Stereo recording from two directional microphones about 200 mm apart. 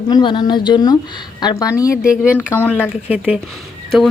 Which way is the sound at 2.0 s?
5° right (ahead or behind).